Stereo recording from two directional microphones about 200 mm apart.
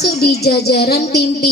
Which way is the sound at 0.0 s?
55° left (ahead or behind).